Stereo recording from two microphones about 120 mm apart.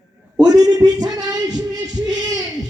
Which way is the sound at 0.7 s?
35° right (ahead or behind).